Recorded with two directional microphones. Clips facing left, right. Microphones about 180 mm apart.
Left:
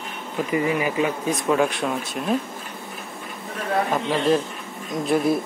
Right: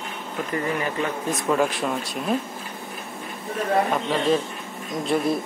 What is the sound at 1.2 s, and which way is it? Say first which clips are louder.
Speech: right 1 dB; centre (ahead or behind).